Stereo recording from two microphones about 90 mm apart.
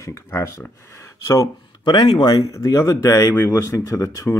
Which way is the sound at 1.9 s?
65° left (ahead or behind).